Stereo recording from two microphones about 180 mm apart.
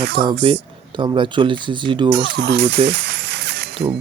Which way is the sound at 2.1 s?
70° right (ahead or behind).